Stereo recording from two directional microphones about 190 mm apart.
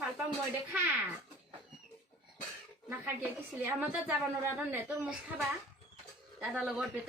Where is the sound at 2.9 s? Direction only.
10° right (ahead or behind).